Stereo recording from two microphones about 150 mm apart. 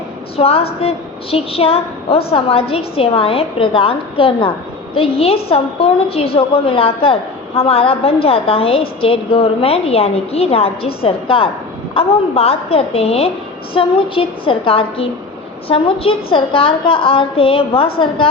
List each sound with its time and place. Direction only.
0.3 s a woman's voice: 40° left (ahead or behind)